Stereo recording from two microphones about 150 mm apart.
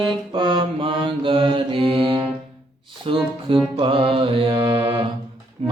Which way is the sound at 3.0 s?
35° right (ahead or behind).